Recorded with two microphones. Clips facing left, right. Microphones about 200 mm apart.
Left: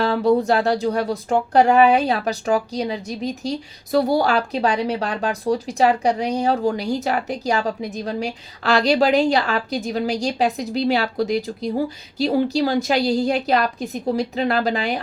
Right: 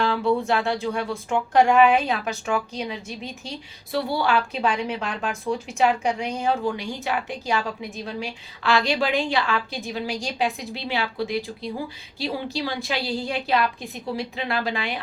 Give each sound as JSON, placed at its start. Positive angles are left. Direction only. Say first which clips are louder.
{"t": 0.0, "sound": "speech", "louder": "left 5 dB", "side_deg": 40}